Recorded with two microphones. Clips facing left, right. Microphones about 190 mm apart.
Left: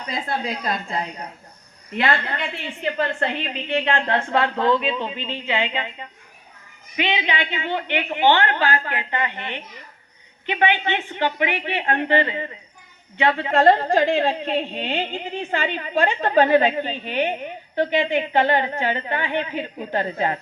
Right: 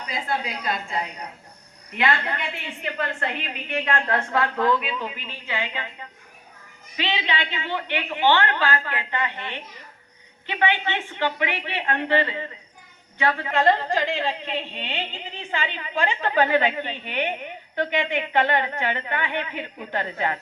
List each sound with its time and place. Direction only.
2.0 s a woman's voice: 35° left (ahead or behind)
13.5 s a woman's voice: 45° left (ahead or behind)